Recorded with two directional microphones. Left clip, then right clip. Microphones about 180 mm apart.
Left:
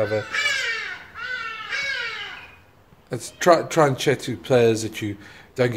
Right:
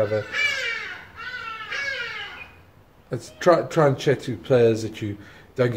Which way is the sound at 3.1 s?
20° left (ahead or behind).